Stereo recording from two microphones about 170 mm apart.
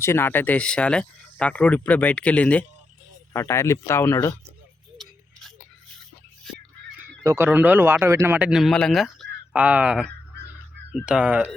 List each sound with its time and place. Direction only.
0.0 s speech: 15° left (ahead or behind)
7.3 s speech: 15° right (ahead or behind)